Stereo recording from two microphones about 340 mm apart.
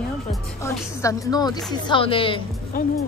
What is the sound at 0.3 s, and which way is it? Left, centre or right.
Music, centre.